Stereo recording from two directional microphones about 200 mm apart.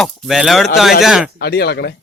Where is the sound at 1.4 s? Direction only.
55° left (ahead or behind).